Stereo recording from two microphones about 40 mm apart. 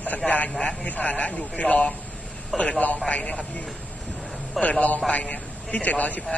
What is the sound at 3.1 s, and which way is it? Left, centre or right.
Speech, left.